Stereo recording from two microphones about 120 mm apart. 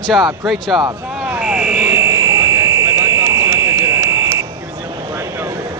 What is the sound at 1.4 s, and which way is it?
Buzzer, 5° right (ahead or behind).